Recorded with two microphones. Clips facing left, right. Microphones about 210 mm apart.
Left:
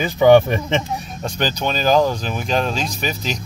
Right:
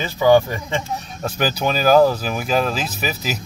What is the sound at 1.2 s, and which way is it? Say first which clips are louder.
Speech: right 2 dB; 10° right (ahead or behind).